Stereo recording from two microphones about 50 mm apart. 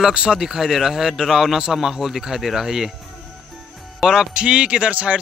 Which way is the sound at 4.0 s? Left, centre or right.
Centre.